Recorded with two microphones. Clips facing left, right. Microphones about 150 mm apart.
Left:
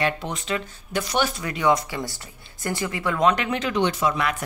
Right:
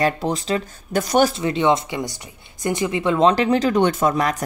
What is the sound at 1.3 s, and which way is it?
A woman's voice, 25° right (ahead or behind).